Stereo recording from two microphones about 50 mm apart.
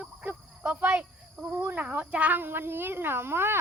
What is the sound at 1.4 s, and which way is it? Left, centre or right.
Speech, right.